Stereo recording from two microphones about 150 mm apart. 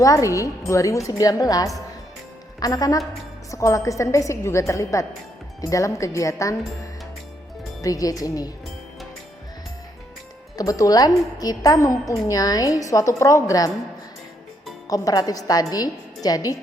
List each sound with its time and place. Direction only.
0.0 s a woman's voice: 20° left (ahead or behind)
7.8 s a woman's voice: 25° left (ahead or behind)
10.6 s a woman's voice: 25° left (ahead or behind)
14.8 s a woman's voice: 25° left (ahead or behind)